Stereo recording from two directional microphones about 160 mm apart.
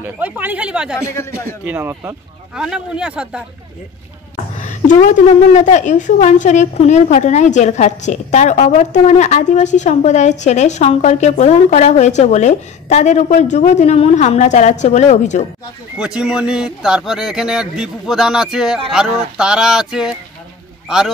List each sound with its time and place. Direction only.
0.0 s speech: 10° right (ahead or behind)
2.5 s speech: 5° right (ahead or behind)
4.6 s a woman's voice: 50° left (ahead or behind)
16.0 s speech: 5° right (ahead or behind)